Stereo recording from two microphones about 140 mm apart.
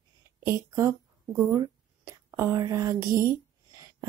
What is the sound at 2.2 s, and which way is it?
Whispering, 15° right (ahead or behind).